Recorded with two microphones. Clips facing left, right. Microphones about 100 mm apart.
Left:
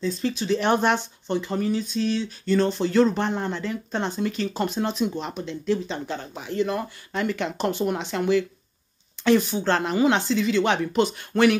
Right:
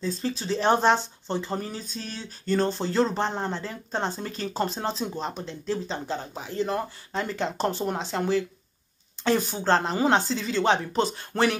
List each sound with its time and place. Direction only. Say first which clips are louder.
0.4 s speech: even; 35° right (ahead or behind)